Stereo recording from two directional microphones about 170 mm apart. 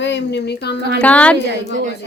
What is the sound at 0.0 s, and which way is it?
Speech, 90° left.